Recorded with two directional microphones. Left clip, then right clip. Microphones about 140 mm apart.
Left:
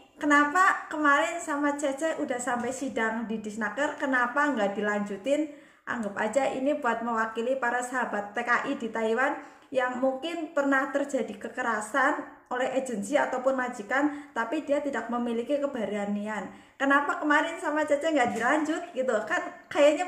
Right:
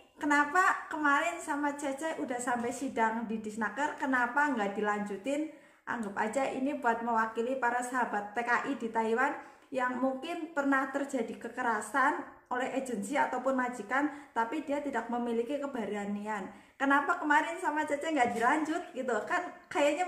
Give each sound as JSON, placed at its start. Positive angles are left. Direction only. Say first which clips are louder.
{"t": 0.2, "sound": "a woman's voice", "louder": "left 5 dB", "side_deg": 20}